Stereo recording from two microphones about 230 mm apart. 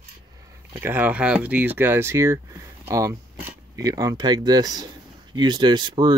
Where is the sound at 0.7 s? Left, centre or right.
Centre.